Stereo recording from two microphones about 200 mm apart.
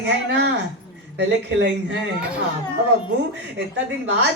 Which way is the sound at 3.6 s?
60° right (ahead or behind).